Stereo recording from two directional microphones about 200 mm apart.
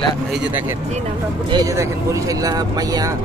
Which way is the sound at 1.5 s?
15° right (ahead or behind).